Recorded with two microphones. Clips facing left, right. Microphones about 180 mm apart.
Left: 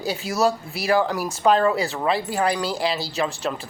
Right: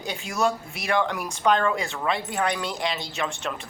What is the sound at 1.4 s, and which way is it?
A man's voice, 35° left (ahead or behind).